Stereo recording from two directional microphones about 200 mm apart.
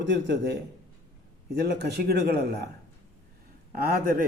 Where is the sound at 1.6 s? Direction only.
55° right (ahead or behind).